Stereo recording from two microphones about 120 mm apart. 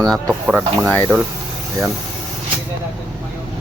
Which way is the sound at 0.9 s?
15° left (ahead or behind).